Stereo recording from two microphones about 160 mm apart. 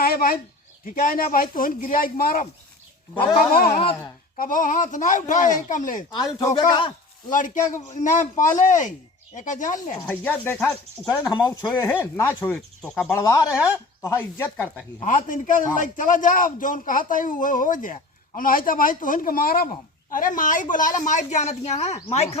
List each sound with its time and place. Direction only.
0.0 s a sound: 70° left (ahead or behind)
0.9 s a man's voice: 60° left (ahead or behind)
3.5 s speech: 65° left (ahead or behind)
6.1 s speech: 25° left (ahead or behind)
7.3 s speech: 55° left (ahead or behind)
10.1 s speech: 10° left (ahead or behind); by 11.6 s 25° left (ahead or behind)
11.8 s speech: 15° left (ahead or behind)
13.1 s speech: 25° left (ahead or behind)
15.0 s a man's voice: 55° left (ahead or behind)